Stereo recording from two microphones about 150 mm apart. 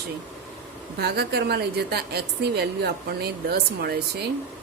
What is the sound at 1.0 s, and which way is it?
A woman's voice, 90° right.